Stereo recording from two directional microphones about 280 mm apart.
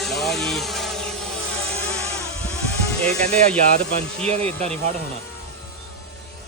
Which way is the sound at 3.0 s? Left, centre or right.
Centre.